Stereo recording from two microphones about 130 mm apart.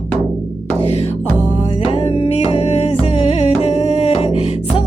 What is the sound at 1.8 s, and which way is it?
Music, 45° left (ahead or behind).